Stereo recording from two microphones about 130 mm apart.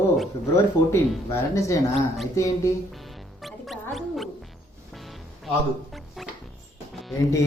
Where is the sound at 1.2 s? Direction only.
20° left (ahead or behind).